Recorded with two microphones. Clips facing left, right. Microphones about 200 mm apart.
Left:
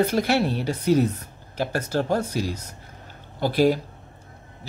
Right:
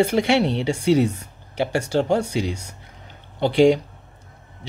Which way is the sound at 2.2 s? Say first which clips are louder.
Right 2 dB; 70° right (ahead or behind).